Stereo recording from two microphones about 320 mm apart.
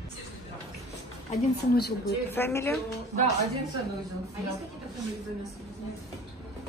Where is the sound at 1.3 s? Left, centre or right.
Left.